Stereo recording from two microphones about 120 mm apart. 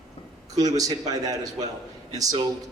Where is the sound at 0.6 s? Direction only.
30° right (ahead or behind).